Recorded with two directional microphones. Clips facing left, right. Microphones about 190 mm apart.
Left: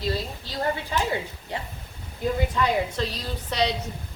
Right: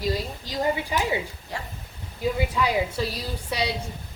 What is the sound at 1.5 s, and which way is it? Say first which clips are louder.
Speech: left 2 dB; 20° left (ahead or behind).